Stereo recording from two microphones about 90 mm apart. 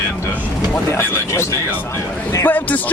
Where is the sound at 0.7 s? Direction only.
30° left (ahead or behind).